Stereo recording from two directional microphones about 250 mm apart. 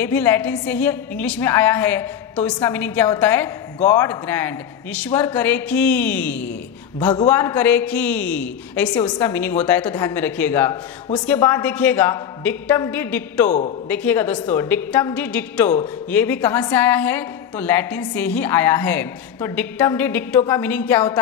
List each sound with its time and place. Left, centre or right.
0.0 s a woman's voice: centre
13.5 s speech: left
13.8 s a woman's voice: centre